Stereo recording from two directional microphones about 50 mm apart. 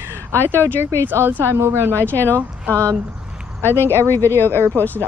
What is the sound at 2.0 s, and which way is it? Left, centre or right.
Speech, left.